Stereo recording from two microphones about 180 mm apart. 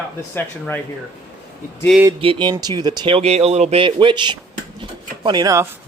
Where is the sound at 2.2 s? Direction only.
30° right (ahead or behind).